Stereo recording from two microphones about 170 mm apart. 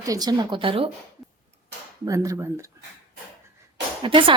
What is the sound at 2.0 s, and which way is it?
Speech, 20° right (ahead or behind).